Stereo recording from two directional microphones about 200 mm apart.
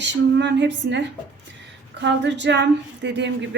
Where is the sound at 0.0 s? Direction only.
60° right (ahead or behind).